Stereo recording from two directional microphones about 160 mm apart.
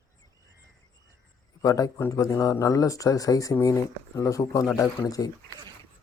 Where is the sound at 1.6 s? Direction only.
20° left (ahead or behind).